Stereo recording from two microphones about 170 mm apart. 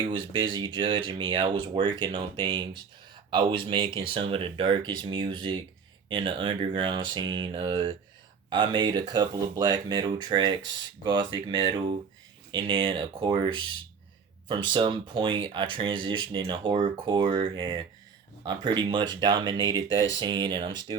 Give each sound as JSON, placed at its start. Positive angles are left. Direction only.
{"t": 0.1, "sound": "speech", "side_deg": -30}